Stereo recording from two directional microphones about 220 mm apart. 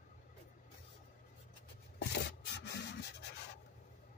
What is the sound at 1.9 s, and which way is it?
Rub, 50° left (ahead or behind).